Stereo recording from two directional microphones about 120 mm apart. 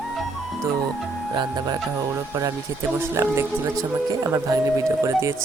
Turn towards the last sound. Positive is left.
turn(degrees=-25)  # may be behind; listen again after turning